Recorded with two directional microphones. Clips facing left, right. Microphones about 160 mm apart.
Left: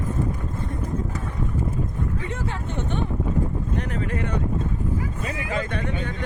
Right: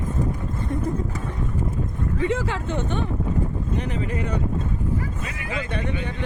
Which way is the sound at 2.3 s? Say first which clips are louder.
Right 5 dB; 90° right.